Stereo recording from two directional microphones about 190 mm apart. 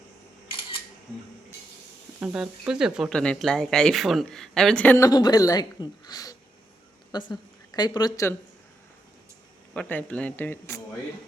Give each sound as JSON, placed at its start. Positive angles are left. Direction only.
{"t": 2.2, "sound": "a woman's voice", "side_deg": -5}
{"t": 9.7, "sound": "speech", "side_deg": 5}